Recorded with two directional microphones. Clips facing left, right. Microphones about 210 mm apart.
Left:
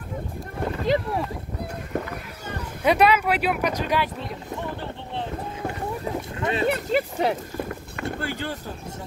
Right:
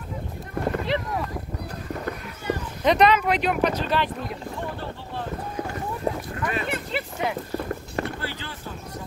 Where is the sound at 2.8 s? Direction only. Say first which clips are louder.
Even; 10° left (ahead or behind).